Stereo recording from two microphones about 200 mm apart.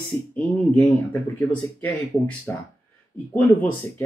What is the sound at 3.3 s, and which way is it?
Speech, 10° left (ahead or behind).